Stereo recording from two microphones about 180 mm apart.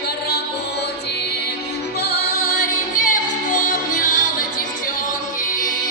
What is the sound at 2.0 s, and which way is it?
Music, 65° left (ahead or behind).